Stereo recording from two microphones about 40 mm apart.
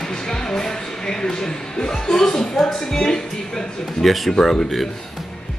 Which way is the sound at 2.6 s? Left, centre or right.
Centre.